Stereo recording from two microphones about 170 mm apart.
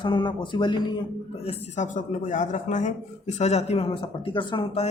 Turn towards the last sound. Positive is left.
turn(degrees=35)  # may be behind; listen again after turning